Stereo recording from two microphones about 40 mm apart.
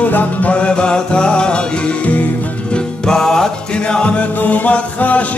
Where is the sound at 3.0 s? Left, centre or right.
Centre.